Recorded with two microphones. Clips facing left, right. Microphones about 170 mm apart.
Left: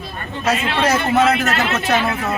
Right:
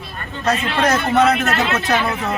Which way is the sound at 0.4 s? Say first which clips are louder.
Even; 5° left (ahead or behind).